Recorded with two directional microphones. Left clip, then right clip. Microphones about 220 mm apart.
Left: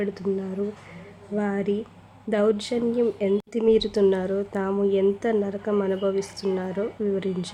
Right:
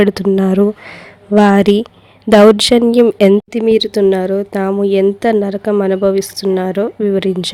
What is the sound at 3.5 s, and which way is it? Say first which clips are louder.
A woman's voice: right 8 dB; 35° right (ahead or behind).